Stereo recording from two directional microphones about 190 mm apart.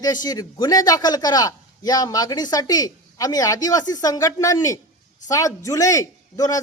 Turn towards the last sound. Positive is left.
turn(degrees=20)  # may be behind; listen again after turning